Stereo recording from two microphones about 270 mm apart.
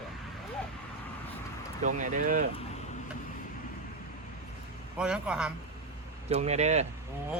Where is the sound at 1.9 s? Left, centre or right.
Right.